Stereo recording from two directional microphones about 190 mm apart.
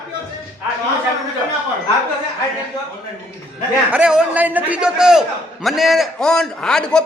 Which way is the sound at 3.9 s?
5° right (ahead or behind).